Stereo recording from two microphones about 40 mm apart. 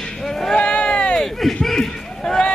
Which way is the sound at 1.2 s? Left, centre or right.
Centre.